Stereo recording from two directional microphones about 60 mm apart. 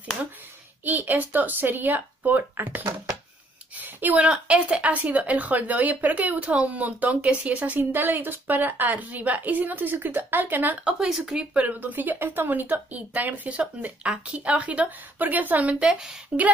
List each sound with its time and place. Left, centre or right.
0.8 s a woman's voice: right
7.9 s a woman's voice: right
10.8 s speech: centre
11.5 s speech: right